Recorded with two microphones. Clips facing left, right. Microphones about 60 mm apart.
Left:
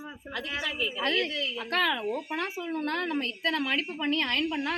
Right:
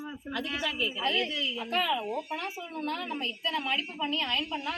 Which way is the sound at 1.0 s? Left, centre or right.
Left.